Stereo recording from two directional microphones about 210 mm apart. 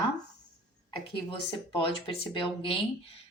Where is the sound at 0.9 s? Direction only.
25° left (ahead or behind).